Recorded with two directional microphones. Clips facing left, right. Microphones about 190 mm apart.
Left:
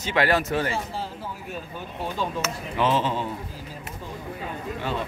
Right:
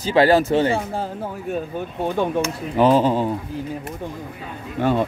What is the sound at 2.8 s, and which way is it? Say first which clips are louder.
Speech: right 8 dB; 40° right (ahead or behind).